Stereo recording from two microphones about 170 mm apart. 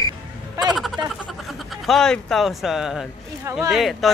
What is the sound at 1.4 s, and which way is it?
Speech, centre (ahead or behind).